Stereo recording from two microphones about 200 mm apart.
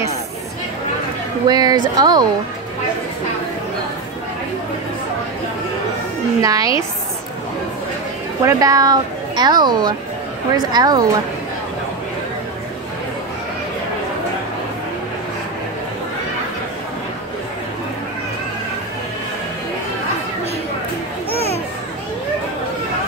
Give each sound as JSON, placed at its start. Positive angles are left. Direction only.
{"t": 1.5, "sound": "speech", "side_deg": -20}
{"t": 6.4, "sound": "a woman's voice", "side_deg": -15}
{"t": 8.5, "sound": "speech", "side_deg": -15}
{"t": 21.3, "sound": "a sound", "side_deg": 30}